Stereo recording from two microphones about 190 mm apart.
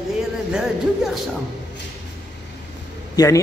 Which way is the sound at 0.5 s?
Centre (ahead or behind).